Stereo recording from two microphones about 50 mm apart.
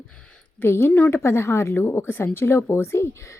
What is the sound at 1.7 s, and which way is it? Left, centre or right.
A woman's voice, left.